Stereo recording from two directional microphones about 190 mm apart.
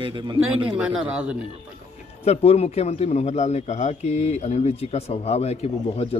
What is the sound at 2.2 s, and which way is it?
A man's voice, 35° left (ahead or behind).